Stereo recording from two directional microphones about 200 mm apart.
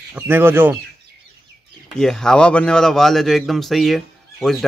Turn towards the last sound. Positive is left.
turn(degrees=0)  # may be behind; listen again after turning